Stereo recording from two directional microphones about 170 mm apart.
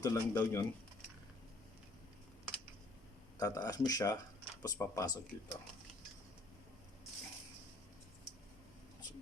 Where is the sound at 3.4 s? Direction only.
20° left (ahead or behind).